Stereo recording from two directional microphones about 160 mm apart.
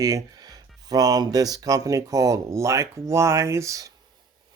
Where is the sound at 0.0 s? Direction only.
20° right (ahead or behind).